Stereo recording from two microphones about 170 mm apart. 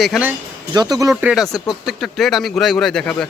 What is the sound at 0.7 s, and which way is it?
Speech, 25° right (ahead or behind).